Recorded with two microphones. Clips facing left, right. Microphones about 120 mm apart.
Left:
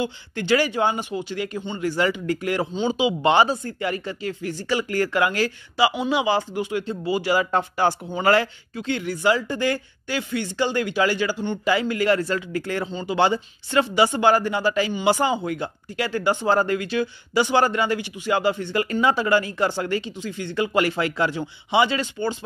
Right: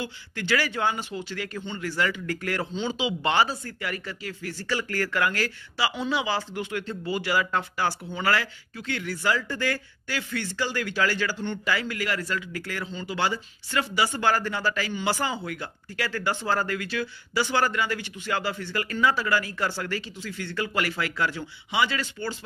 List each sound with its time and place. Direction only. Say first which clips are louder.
0.0 s speech: left 6 dB; 20° left (ahead or behind)